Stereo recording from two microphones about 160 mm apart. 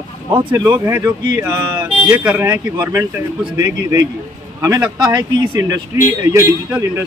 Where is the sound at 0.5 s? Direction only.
20° right (ahead or behind).